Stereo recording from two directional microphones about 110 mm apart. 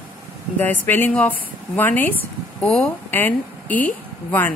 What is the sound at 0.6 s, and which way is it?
Speech, 20° left (ahead or behind).